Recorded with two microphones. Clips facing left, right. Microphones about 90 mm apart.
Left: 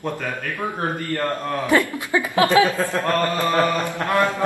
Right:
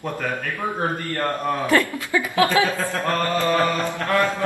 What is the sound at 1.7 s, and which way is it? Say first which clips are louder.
Speech: left 3 dB; 20° left (ahead or behind).